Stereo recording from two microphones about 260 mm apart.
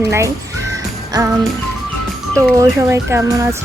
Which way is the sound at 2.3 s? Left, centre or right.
Centre.